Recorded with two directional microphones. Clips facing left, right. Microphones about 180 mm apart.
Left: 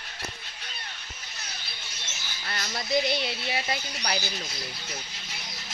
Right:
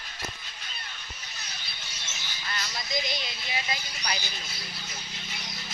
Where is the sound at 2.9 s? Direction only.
65° left (ahead or behind).